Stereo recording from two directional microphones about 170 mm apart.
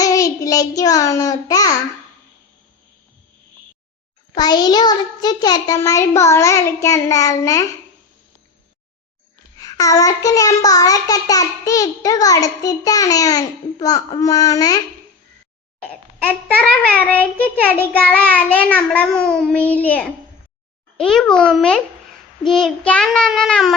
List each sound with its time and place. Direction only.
0.0 s child singing: 20° left (ahead or behind)
4.4 s child singing: 25° left (ahead or behind)
9.6 s child singing: 20° left (ahead or behind)
15.8 s a child's voice: 5° left (ahead or behind)
21.0 s child singing: 5° left (ahead or behind)